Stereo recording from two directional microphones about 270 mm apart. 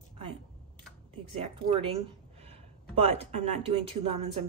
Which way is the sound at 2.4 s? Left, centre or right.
Right.